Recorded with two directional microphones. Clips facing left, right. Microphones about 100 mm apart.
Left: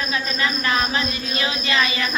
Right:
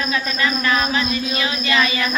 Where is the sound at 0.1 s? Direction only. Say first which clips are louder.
Right 2 dB; 30° left (ahead or behind).